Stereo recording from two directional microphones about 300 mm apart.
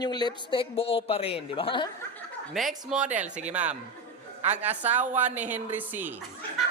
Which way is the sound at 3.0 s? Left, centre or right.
Right.